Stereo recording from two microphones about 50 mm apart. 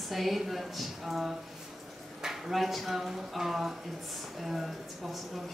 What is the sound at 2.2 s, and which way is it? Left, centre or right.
Speech, centre.